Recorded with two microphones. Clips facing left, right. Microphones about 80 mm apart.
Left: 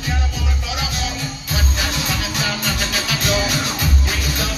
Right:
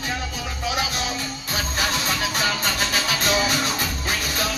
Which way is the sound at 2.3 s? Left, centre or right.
Right.